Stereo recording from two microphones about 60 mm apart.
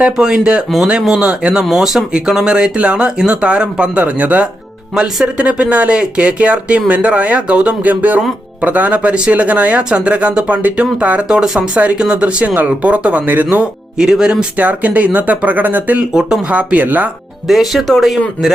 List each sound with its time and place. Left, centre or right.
0.0 s speech: centre
11.3 s speech: centre; by 13.7 s right
14.0 s speech: centre
14.5 s speech: right
17.5 s speech: centre